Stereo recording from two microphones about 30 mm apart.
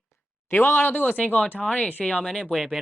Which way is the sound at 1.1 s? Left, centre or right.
Left.